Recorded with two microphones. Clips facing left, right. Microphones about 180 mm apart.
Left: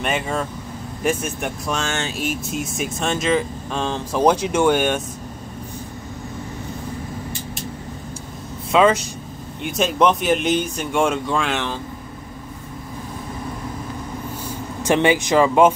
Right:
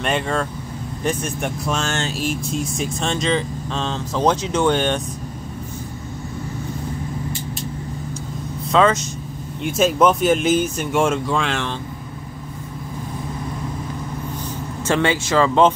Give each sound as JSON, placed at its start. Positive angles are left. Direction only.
{"t": 0.0, "sound": "speech", "side_deg": 5}
{"t": 8.7, "sound": "speech", "side_deg": 15}
{"t": 9.6, "sound": "speech", "side_deg": 0}
{"t": 14.9, "sound": "speech", "side_deg": 15}